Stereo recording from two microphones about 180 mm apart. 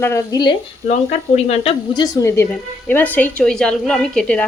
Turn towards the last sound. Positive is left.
turn(degrees=5)  # may be behind; listen again after turning